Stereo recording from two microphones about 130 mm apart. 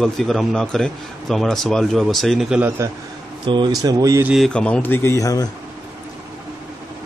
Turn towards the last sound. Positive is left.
turn(degrees=25)  # may be behind; listen again after turning